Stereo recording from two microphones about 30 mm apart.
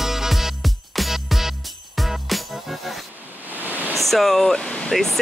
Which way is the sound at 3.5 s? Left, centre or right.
Right.